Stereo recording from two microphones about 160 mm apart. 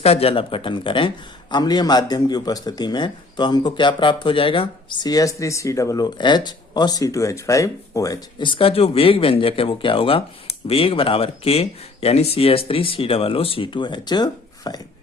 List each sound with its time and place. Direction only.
0.0 s a man's voice: 40° left (ahead or behind)